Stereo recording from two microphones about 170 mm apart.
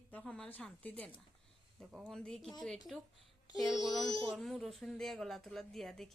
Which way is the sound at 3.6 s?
Centre (ahead or behind).